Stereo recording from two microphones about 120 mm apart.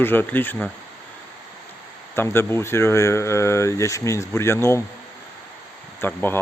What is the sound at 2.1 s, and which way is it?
Speech, 20° left (ahead or behind).